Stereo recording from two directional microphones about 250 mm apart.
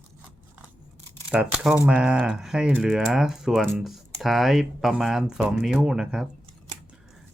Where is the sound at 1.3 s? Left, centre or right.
Centre.